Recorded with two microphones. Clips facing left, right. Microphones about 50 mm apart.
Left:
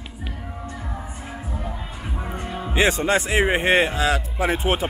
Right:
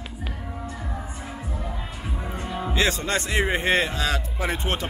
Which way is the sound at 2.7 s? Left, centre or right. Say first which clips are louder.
Left 5 dB; left.